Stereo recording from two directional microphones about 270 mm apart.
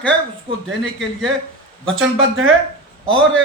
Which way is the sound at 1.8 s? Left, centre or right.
Right.